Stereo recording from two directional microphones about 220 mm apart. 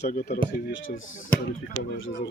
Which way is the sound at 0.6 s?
55° left (ahead or behind).